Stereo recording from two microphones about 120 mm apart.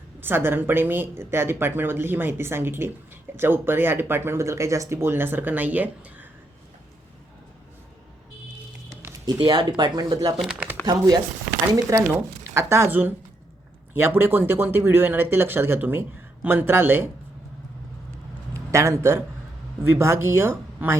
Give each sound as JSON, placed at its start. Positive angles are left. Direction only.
{"t": 0.2, "sound": "speech", "side_deg": -20}
{"t": 9.4, "sound": "speech", "side_deg": -40}
{"t": 10.3, "sound": "speech", "side_deg": -5}
{"t": 10.8, "sound": "speech", "side_deg": -35}
{"t": 18.5, "sound": "a man's voice", "side_deg": -25}